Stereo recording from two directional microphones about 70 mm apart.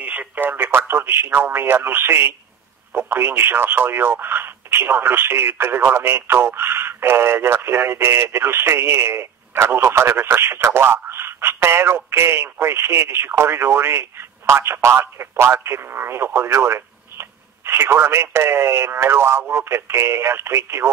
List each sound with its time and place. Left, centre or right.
0.0 s speech: right